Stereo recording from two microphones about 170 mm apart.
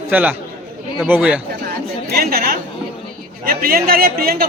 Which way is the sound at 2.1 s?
65° right (ahead or behind).